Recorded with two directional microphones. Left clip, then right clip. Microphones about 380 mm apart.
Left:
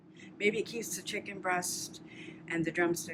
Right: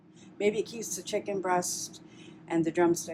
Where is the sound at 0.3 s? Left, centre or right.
Centre.